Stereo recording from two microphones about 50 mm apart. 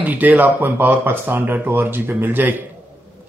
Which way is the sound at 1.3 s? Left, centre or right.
Right.